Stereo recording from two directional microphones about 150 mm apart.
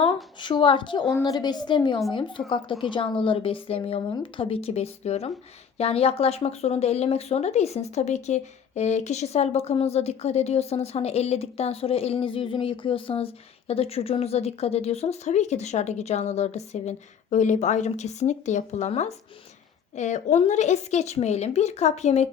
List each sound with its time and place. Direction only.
0.0 s a woman's voice: 30° left (ahead or behind); by 22.3 s 45° left (ahead or behind)